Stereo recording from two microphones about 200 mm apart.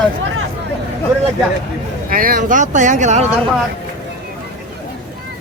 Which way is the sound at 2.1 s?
45° right (ahead or behind).